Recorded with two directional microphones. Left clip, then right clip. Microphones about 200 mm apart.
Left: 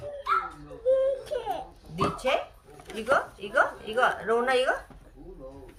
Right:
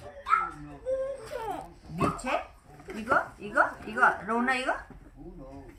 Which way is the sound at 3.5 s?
40° left (ahead or behind).